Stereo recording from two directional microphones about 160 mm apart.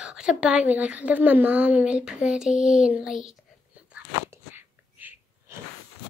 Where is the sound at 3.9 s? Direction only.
10° right (ahead or behind).